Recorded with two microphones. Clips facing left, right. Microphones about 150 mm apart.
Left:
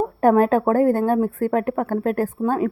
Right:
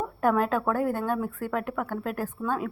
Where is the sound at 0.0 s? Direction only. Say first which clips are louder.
Left 8 dB; 45° left (ahead or behind).